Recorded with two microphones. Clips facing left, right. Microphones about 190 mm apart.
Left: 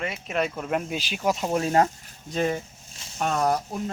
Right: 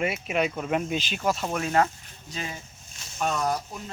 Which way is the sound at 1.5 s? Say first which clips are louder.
Left 4 dB; 30° left (ahead or behind).